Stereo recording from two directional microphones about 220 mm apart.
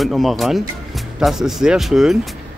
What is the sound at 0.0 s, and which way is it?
Speech, centre (ahead or behind).